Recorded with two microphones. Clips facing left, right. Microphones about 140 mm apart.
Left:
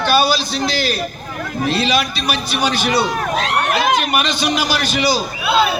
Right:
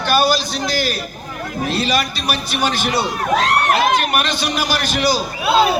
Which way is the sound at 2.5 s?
50° right (ahead or behind).